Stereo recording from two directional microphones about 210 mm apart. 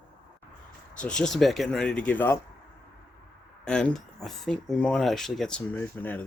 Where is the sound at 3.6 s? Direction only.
5° left (ahead or behind).